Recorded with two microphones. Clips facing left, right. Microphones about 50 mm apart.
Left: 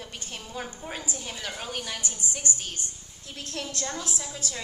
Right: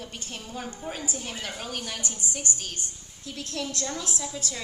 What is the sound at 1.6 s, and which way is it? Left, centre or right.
Speech, left.